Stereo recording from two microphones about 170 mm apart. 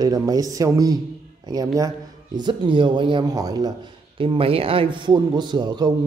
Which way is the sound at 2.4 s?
30° right (ahead or behind).